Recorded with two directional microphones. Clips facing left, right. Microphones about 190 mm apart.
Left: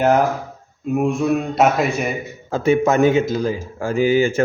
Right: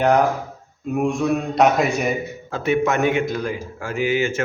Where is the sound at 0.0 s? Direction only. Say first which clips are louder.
Left 1 dB; 5° left (ahead or behind).